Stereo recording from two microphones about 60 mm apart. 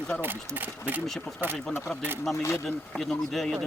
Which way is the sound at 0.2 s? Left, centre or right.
Right.